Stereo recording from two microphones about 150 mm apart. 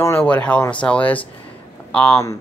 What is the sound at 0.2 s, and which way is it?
Speech, 10° left (ahead or behind).